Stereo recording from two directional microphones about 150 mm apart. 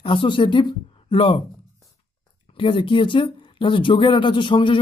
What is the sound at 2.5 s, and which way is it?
A man's voice, 35° left (ahead or behind).